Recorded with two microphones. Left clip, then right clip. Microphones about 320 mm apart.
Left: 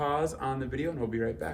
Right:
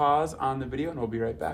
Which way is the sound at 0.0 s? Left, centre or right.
Centre.